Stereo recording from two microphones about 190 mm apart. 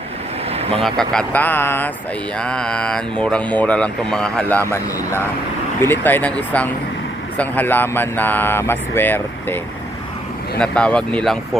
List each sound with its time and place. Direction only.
0.5 s vehicle: 35° right (ahead or behind)
0.8 s speech: centre (ahead or behind)
5.8 s speech: 10° left (ahead or behind)
10.6 s speech: 5° left (ahead or behind)